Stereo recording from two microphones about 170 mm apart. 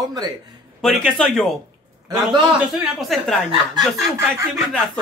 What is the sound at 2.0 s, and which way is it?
Speech, 25° right (ahead or behind).